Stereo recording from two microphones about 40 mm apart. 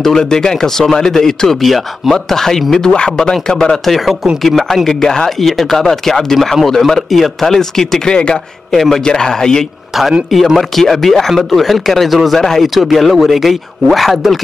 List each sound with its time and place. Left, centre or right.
0.0 s speech: centre
2.9 s speech: left
3.8 s speech: centre
8.1 s speech: left
8.7 s speech: centre
10.8 s speech: centre